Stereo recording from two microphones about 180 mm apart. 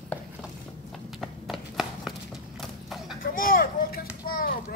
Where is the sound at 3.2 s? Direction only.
50° left (ahead or behind).